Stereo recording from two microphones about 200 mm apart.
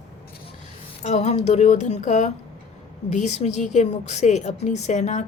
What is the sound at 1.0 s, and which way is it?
A woman's voice, 35° left (ahead or behind).